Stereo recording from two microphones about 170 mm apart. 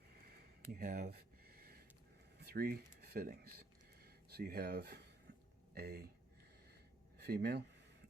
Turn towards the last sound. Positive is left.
turn(degrees=-70)  # may be behind; listen again after turning